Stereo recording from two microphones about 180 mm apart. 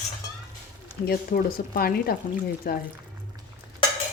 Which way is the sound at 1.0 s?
55° left (ahead or behind).